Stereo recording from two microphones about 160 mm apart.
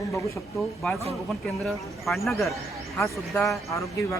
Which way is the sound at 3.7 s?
20° left (ahead or behind).